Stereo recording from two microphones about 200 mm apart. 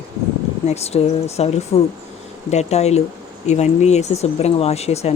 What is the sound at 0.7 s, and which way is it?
Speech, 30° left (ahead or behind).